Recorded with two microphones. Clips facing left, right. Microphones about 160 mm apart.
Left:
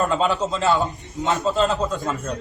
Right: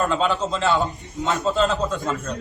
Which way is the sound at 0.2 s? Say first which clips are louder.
Left 1 dB; 5° left (ahead or behind).